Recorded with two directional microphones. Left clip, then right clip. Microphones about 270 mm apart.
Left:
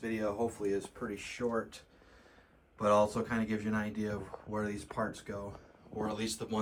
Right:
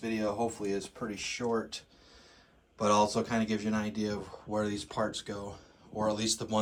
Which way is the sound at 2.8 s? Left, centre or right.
Centre.